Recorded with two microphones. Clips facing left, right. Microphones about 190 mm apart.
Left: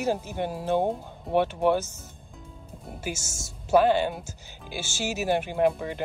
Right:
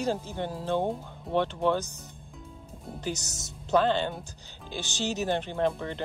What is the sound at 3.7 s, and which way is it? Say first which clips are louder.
Speech: left 4 dB; 15° left (ahead or behind).